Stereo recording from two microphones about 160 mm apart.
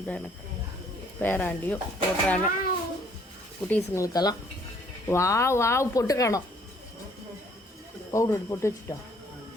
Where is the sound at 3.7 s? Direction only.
20° left (ahead or behind).